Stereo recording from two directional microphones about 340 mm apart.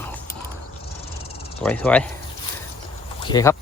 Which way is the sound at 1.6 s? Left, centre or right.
Centre.